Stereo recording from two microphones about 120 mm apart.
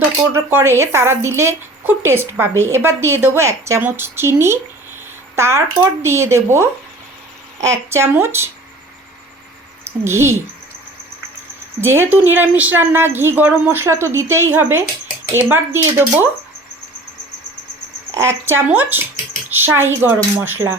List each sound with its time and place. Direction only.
0.3 s a woman's voice: 20° right (ahead or behind)
10.0 s a woman's voice: 20° right (ahead or behind)
11.8 s a woman's voice: 20° right (ahead or behind)
18.1 s a woman's voice: 20° right (ahead or behind)